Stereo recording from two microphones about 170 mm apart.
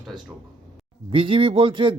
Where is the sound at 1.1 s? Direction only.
30° right (ahead or behind).